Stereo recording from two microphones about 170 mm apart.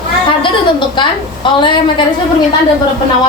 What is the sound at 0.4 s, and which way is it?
A woman's voice, 30° left (ahead or behind).